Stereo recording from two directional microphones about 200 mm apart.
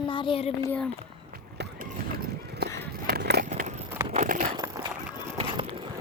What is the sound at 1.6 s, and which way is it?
Run, 55° right (ahead or behind).